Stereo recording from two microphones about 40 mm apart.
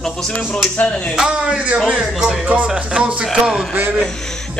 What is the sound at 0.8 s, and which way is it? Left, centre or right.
Speech, left.